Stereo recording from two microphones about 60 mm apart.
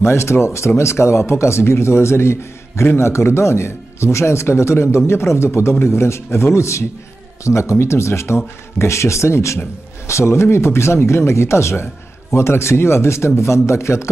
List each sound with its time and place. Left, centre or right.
0.0 s speech: left